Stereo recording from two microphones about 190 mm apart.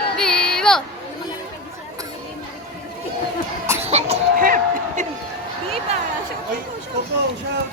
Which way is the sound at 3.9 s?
35° right (ahead or behind).